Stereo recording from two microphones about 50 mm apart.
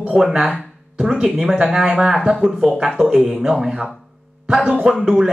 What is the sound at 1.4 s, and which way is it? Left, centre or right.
Speech, centre.